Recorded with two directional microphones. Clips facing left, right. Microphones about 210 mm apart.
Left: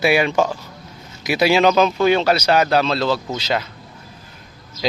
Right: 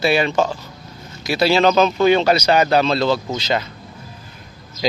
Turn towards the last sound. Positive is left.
turn(degrees=5)  # may be behind; listen again after turning